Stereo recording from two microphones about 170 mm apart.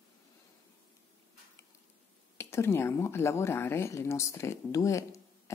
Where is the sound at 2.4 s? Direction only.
15° left (ahead or behind).